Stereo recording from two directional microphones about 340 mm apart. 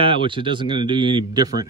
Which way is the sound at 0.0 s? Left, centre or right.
Centre.